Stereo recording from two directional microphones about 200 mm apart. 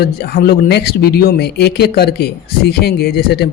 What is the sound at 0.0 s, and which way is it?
Speech, 50° left (ahead or behind).